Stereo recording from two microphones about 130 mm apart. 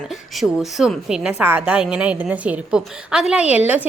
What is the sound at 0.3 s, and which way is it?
A woman's voice, centre (ahead or behind).